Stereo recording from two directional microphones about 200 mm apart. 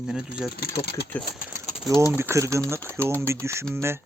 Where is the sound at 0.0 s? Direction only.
5° right (ahead or behind).